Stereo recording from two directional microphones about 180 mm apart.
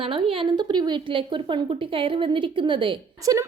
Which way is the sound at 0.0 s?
30° right (ahead or behind).